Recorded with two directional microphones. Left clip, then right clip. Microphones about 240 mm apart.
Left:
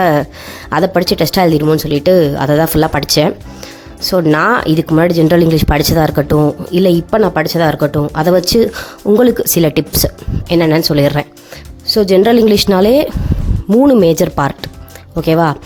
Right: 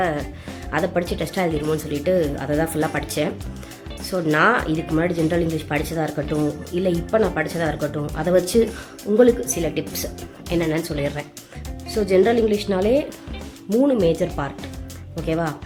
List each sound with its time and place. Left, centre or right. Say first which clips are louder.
0.0 s speech: left 11 dB; left